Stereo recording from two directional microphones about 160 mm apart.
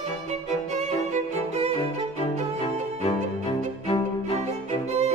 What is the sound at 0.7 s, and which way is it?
Violin, 45° right (ahead or behind).